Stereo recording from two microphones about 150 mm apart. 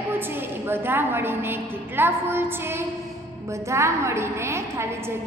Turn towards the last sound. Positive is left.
turn(degrees=-15)  # may be behind; listen again after turning